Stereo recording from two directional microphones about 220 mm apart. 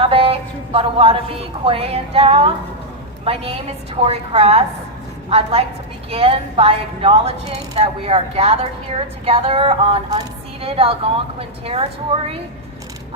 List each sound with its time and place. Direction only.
0.0 s a woman's voice: 25° right (ahead or behind)